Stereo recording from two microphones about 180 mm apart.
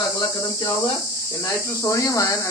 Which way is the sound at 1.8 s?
15° left (ahead or behind).